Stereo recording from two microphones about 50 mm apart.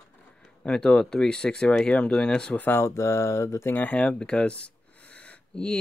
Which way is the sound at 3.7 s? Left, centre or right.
Left.